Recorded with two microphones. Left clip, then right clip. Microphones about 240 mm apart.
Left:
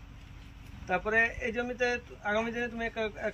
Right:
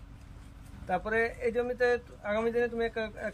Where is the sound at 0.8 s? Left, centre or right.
Centre.